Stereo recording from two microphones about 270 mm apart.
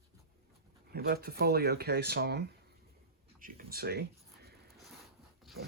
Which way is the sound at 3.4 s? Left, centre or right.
Right.